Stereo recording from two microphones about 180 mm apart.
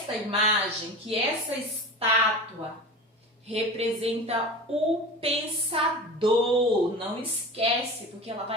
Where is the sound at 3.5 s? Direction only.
35° right (ahead or behind).